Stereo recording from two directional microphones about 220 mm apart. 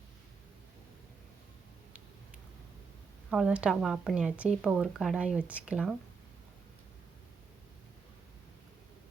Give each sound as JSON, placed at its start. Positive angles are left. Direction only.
{"t": 3.2, "sound": "speech", "side_deg": -5}